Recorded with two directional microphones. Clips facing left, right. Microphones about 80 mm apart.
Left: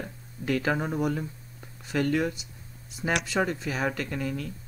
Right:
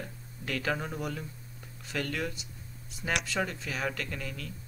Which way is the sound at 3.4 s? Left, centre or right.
Centre.